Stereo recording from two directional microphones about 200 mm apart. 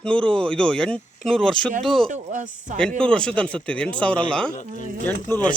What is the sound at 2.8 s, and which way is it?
Speech, 5° left (ahead or behind).